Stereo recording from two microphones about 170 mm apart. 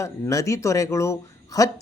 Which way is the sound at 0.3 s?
20° left (ahead or behind).